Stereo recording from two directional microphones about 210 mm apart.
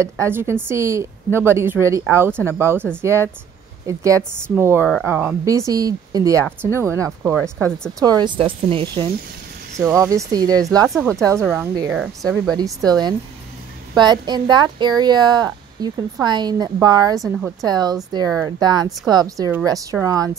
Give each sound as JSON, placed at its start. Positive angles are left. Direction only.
{"t": 0.0, "sound": "a woman's voice", "side_deg": -10}
{"t": 7.5, "sound": "speech", "side_deg": 5}
{"t": 8.0, "sound": "speech", "side_deg": -20}
{"t": 9.8, "sound": "a woman's voice", "side_deg": -15}
{"t": 11.9, "sound": "speech", "side_deg": 0}
{"t": 12.5, "sound": "a woman's voice", "side_deg": -20}
{"t": 13.9, "sound": "speech", "side_deg": -20}
{"t": 17.2, "sound": "speech", "side_deg": 0}
{"t": 17.6, "sound": "a woman's voice", "side_deg": -20}